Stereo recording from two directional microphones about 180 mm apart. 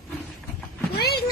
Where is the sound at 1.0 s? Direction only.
60° left (ahead or behind).